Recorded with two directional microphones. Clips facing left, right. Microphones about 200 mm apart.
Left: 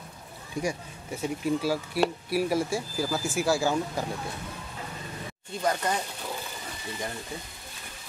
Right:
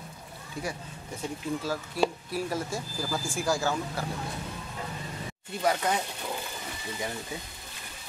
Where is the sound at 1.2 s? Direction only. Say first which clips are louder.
Left 5 dB; 10° left (ahead or behind).